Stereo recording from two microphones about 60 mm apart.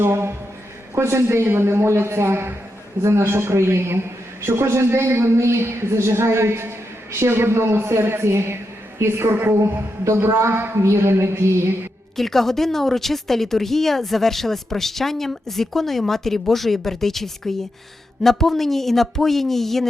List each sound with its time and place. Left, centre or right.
0.0 s a woman's voice: right
10.0 s a woman's voice: right
12.1 s a woman's voice: centre